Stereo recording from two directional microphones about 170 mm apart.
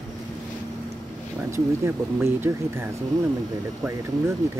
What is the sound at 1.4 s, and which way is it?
Speech, 15° right (ahead or behind).